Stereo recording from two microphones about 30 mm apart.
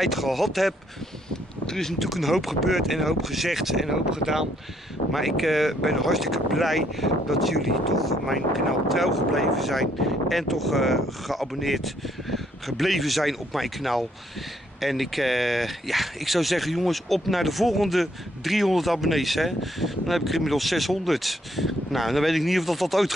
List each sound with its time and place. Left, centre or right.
0.0 s speech: centre
1.3 s speech: centre
2.0 s speech: centre
5.1 s speech: centre